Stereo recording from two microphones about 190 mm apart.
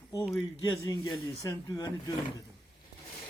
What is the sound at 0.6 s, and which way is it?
A man's voice, 20° left (ahead or behind).